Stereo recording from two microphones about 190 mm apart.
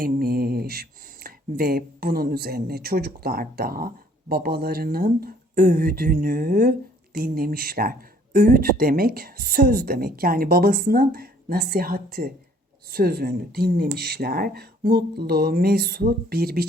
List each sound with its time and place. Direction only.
0.0 s speech: 50° right (ahead or behind)